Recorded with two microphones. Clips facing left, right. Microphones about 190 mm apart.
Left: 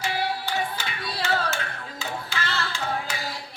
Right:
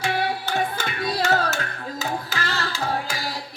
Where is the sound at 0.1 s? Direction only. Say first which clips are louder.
Right 3 dB; 55° right (ahead or behind).